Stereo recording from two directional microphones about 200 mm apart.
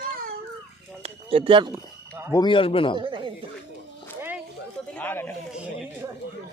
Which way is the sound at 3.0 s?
25° right (ahead or behind).